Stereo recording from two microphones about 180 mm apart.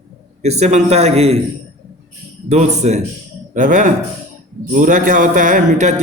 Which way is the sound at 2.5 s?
40° right (ahead or behind).